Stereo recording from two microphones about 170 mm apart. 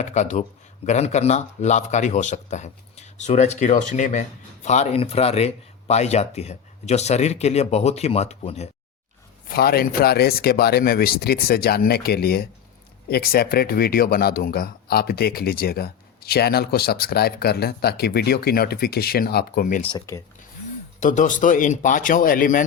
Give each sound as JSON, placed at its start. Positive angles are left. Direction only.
{"t": 0.0, "sound": "speech", "side_deg": 45}
{"t": 9.5, "sound": "speech", "side_deg": 65}
{"t": 19.6, "sound": "speech", "side_deg": 45}
{"t": 21.0, "sound": "speech", "side_deg": 50}